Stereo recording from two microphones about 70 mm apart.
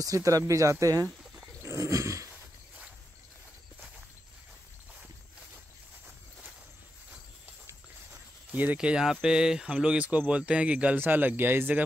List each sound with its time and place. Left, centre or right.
0.0 s speech: right
1.4 s roaring cats: right
8.5 s cricket: right
8.7 s speech: centre; by 11.8 s right